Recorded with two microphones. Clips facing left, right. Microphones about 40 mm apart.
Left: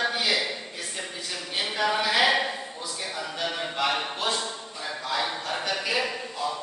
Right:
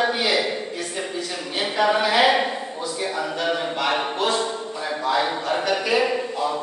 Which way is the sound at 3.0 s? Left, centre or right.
Right.